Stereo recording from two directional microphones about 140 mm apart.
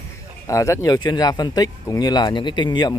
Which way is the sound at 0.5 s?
25° left (ahead or behind).